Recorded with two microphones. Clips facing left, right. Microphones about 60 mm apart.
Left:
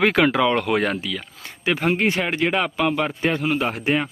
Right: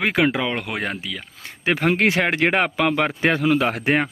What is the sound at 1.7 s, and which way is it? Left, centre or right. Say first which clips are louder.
Speech: right 2 dB; right.